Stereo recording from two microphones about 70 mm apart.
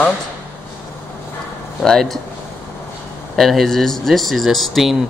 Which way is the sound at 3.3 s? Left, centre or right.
Centre.